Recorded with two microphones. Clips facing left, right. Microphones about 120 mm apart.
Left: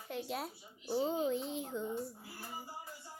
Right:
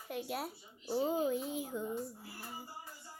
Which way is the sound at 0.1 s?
5° right (ahead or behind).